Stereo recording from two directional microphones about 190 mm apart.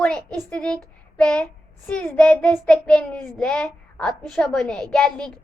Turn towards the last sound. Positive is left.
turn(degrees=5)  # may be behind; listen again after turning